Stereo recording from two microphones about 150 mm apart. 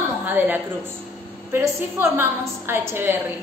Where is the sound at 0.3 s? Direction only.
10° right (ahead or behind).